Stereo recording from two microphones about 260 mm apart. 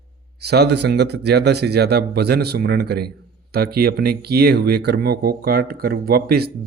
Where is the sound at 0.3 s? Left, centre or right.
Right.